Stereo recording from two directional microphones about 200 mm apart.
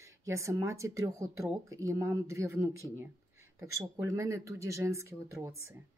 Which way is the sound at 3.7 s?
15° right (ahead or behind).